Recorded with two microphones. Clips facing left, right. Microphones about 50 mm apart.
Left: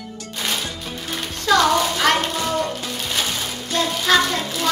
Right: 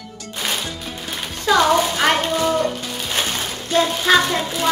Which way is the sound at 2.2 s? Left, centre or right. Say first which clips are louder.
Right 3 dB; centre.